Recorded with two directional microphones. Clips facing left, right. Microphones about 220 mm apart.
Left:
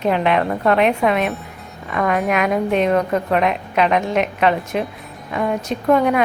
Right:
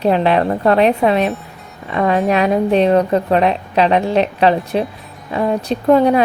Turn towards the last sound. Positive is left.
turn(degrees=-30)  # may be behind; listen again after turning